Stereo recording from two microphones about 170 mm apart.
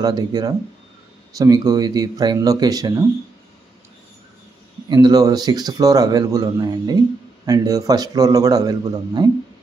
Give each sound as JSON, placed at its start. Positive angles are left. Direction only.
{"t": 0.0, "sound": "speech", "side_deg": -25}
{"t": 4.8, "sound": "speech", "side_deg": -25}